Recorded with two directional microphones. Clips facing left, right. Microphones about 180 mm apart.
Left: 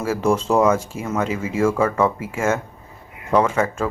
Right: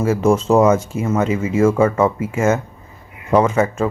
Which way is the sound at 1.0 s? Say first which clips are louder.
Right 6 dB; 5° right (ahead or behind).